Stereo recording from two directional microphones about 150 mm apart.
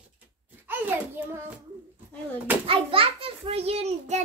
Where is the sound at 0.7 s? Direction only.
15° right (ahead or behind).